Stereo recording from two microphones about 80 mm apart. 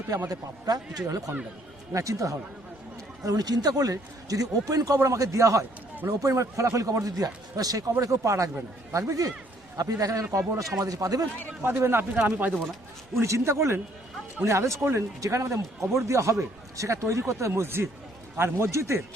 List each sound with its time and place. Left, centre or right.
0.3 s a man's voice: right
1.9 s a man's voice: right
3.2 s a man's voice: right
11.6 s speech: right
13.1 s speech: right